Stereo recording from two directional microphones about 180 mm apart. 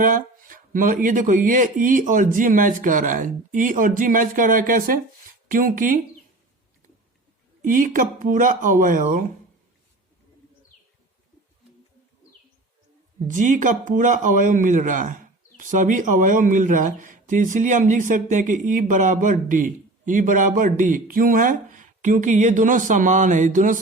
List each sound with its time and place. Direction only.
0.0 s a man's voice: 50° right (ahead or behind)
7.6 s a man's voice: 50° right (ahead or behind)
13.2 s a man's voice: 45° right (ahead or behind)